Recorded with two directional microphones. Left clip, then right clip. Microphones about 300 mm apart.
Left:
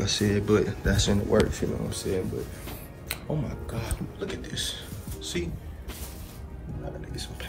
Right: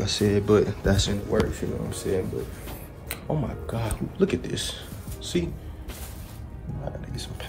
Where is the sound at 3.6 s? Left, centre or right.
Right.